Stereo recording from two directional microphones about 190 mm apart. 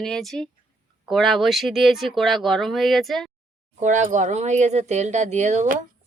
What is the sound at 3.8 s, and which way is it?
Speech, 40° right (ahead or behind).